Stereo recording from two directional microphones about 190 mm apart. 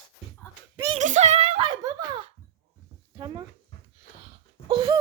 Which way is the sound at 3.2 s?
20° right (ahead or behind).